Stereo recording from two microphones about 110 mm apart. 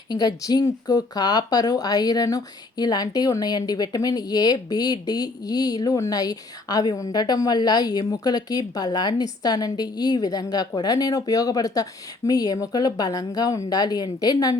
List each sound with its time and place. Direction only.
0.1 s speech: 35° left (ahead or behind)